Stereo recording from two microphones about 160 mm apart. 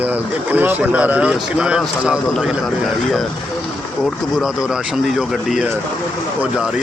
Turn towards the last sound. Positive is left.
turn(degrees=-5)  # may be behind; listen again after turning